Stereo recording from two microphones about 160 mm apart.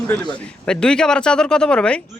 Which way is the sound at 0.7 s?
5° left (ahead or behind).